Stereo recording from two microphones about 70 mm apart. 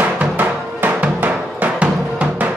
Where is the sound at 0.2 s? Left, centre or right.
Right.